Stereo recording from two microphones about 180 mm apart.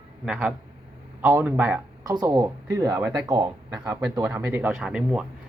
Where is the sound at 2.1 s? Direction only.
20° right (ahead or behind); by 5.3 s 5° right (ahead or behind).